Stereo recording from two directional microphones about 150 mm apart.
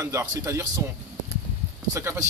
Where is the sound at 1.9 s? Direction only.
20° right (ahead or behind).